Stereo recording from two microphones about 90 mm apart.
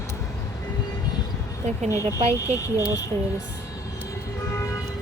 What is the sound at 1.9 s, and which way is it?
Speech, 35° left (ahead or behind).